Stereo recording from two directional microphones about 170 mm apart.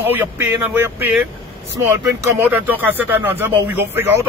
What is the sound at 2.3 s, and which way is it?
Speech, 10° right (ahead or behind).